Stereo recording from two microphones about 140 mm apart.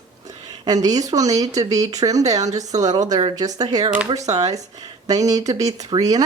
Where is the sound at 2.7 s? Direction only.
25° right (ahead or behind).